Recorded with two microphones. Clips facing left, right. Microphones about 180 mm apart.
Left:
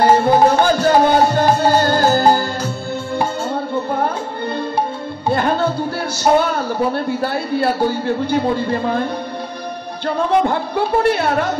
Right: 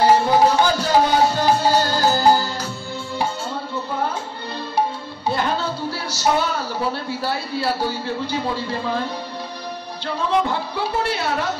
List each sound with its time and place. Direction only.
0.0 s music: 55° left (ahead or behind)
5.3 s music: 55° left (ahead or behind)
6.1 s a man's voice: 55° left (ahead or behind)